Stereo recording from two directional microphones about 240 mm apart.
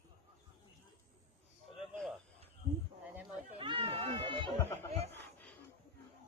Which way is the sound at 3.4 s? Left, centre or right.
Right.